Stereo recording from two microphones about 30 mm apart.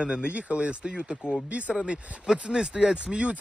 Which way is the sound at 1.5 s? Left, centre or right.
Right.